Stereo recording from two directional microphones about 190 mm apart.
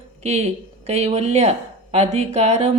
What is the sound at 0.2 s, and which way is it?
Speech, 35° right (ahead or behind).